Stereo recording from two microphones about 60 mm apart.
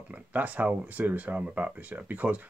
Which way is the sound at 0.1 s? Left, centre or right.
Right.